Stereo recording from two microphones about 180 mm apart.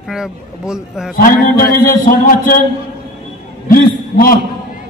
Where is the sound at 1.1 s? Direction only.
50° left (ahead or behind).